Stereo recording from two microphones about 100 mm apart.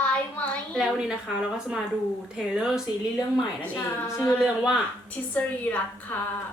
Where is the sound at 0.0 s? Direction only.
15° left (ahead or behind).